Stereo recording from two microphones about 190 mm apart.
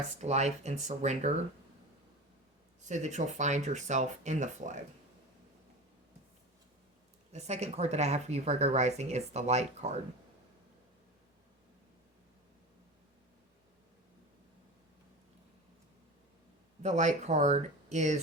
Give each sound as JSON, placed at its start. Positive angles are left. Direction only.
{"t": 0.2, "sound": "speech", "side_deg": -35}
{"t": 2.8, "sound": "speech", "side_deg": -40}
{"t": 7.3, "sound": "speech", "side_deg": -35}
{"t": 16.8, "sound": "speech", "side_deg": -40}